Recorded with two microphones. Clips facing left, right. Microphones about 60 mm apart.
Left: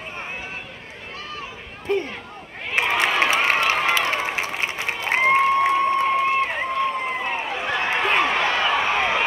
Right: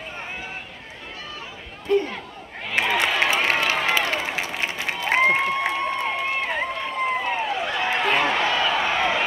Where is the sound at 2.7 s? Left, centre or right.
Left.